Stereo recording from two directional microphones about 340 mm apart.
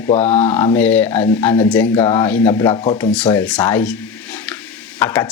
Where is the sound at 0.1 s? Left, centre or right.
Centre.